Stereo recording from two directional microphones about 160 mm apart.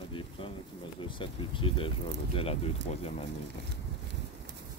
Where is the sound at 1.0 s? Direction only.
30° left (ahead or behind).